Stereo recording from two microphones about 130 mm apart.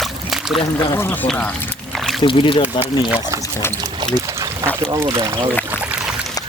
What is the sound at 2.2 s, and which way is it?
Speech, 40° left (ahead or behind).